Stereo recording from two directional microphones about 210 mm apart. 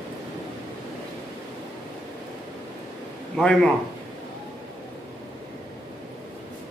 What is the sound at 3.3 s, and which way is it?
Speech, 5° left (ahead or behind).